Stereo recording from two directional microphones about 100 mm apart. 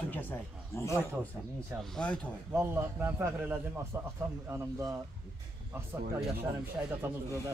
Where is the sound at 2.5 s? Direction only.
25° right (ahead or behind).